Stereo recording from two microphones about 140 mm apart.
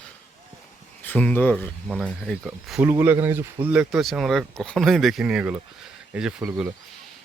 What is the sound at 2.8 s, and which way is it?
Speech, 15° right (ahead or behind).